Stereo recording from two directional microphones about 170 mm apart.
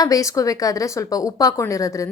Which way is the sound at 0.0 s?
20° left (ahead or behind).